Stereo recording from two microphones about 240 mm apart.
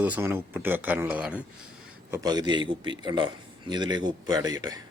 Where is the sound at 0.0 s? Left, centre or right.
Centre.